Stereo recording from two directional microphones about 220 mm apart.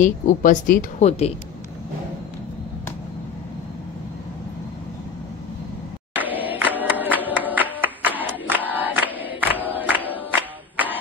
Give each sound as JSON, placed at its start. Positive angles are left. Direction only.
{"t": 0.0, "sound": "speech", "side_deg": 35}
{"t": 6.1, "sound": "music", "side_deg": -10}
{"t": 8.2, "sound": "crowd", "side_deg": -10}
{"t": 10.3, "sound": "music", "side_deg": -10}